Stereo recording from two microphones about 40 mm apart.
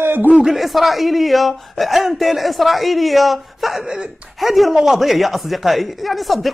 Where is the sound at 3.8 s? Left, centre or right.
Centre.